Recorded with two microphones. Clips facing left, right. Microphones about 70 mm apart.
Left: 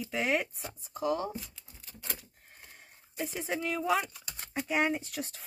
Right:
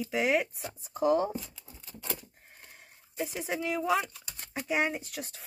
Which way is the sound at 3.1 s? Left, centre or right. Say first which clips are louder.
Right 1 dB; centre.